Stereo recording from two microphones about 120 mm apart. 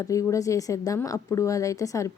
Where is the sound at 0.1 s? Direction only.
25° left (ahead or behind).